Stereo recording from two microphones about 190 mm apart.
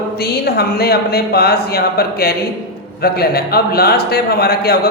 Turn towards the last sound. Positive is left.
turn(degrees=55)  # may be behind; listen again after turning